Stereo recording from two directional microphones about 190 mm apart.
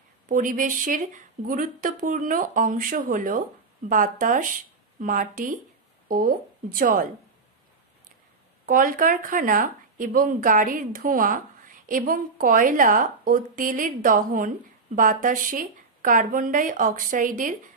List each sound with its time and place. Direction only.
0.3 s a woman's voice: 45° right (ahead or behind)
8.6 s a woman's voice: 45° right (ahead or behind)